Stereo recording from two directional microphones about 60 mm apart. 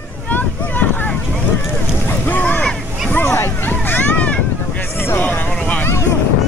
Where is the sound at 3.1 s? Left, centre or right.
Left.